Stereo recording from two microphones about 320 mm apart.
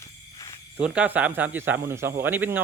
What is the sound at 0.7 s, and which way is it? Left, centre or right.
Speech, centre.